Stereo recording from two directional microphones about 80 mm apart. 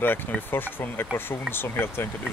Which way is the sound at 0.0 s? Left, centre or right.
Left.